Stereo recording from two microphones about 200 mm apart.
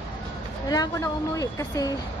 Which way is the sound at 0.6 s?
15° left (ahead or behind).